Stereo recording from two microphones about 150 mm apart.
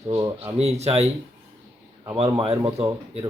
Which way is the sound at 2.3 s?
40° right (ahead or behind).